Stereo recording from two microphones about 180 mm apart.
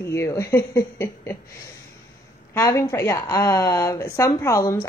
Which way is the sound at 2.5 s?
20° left (ahead or behind).